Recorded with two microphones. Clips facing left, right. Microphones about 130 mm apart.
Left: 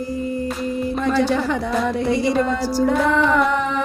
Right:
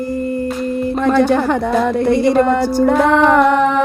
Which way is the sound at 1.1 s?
55° right (ahead or behind).